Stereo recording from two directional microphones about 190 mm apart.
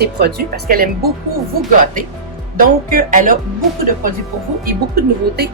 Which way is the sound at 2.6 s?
45° right (ahead or behind).